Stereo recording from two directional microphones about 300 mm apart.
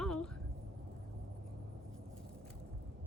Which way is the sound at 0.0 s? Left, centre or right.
Centre.